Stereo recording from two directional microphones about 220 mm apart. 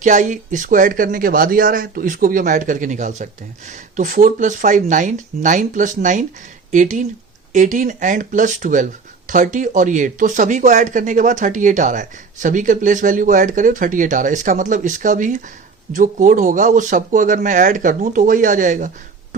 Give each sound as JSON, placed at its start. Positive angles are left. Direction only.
{"t": 0.0, "sound": "speech", "side_deg": -35}